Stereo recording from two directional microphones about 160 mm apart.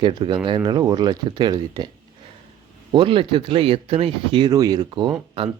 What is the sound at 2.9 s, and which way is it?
Speech, 35° right (ahead or behind).